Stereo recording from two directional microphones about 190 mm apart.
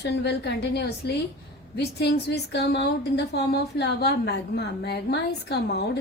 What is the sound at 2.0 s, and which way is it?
A woman's voice, 60° left (ahead or behind).